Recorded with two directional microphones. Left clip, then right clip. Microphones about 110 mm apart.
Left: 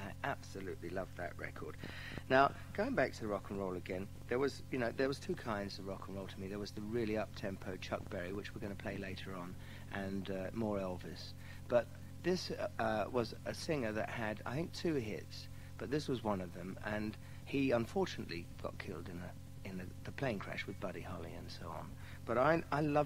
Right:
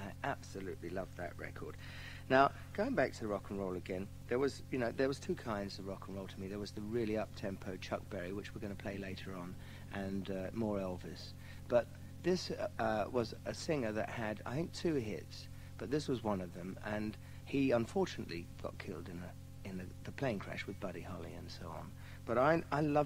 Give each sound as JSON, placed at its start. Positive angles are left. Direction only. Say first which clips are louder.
{"t": 0.0, "sound": "speech", "louder": "even", "side_deg": -35}